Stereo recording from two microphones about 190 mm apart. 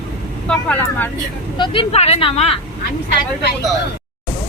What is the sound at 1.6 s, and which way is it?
Speech, 30° left (ahead or behind).